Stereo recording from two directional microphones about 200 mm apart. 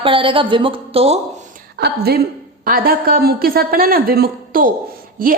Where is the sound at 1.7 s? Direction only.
50° right (ahead or behind).